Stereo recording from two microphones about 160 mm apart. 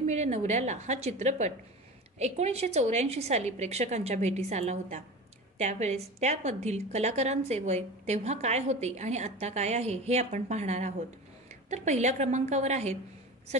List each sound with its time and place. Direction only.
0.0 s a woman's voice: 45° right (ahead or behind)